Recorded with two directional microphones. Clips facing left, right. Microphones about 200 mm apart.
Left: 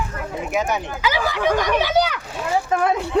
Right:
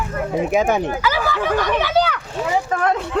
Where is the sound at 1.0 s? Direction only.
15° left (ahead or behind).